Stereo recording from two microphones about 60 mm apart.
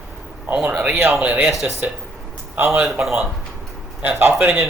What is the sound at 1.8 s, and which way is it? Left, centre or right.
Speech, right.